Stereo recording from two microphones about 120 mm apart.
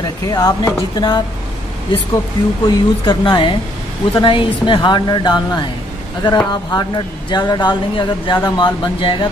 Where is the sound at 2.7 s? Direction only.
35° left (ahead or behind).